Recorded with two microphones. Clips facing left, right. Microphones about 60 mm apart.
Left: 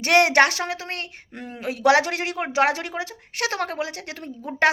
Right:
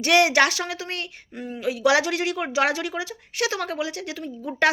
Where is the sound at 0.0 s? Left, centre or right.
Left.